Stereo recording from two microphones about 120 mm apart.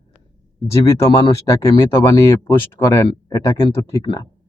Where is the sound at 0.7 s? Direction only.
25° left (ahead or behind).